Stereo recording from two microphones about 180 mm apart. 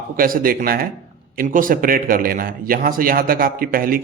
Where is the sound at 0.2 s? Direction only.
50° right (ahead or behind).